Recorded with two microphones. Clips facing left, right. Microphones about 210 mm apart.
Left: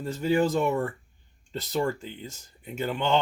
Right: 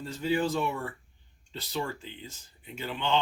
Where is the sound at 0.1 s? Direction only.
50° left (ahead or behind).